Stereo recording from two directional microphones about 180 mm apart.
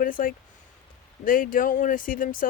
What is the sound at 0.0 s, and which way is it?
Speech, 50° left (ahead or behind).